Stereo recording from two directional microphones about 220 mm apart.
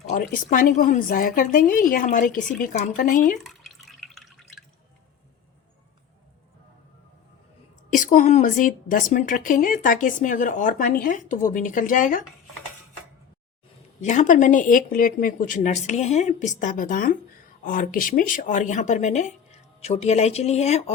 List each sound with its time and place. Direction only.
0.1 s speech: 40° left (ahead or behind)
3.4 s drip: centre (ahead or behind)
7.9 s speech: 35° left (ahead or behind)
14.0 s speech: 35° left (ahead or behind)